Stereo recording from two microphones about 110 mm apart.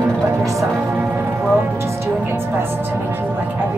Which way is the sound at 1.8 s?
20° right (ahead or behind).